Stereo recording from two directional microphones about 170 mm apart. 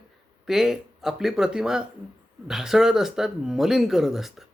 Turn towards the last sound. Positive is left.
turn(degrees=0)  # may be behind; listen again after turning